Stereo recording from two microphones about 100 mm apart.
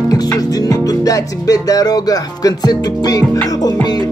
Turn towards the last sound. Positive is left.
turn(degrees=40)  # may be behind; listen again after turning